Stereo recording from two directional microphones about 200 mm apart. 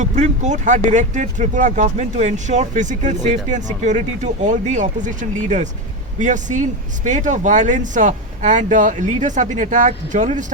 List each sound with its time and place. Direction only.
0.0 s speech: 35° right (ahead or behind)